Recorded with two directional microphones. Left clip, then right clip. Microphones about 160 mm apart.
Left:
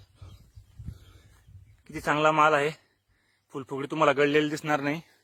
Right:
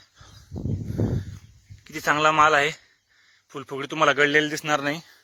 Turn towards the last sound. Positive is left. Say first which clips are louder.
# right 3 dB
turn(degrees=20)  # may be behind; listen again after turning